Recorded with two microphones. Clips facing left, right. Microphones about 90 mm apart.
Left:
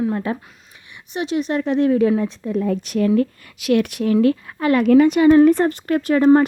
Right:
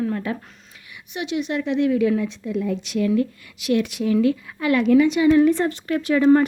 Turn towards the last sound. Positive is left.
turn(degrees=40)  # may be behind; listen again after turning